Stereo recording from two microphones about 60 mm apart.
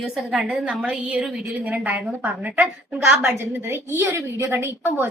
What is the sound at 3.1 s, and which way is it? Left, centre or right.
Speech, centre.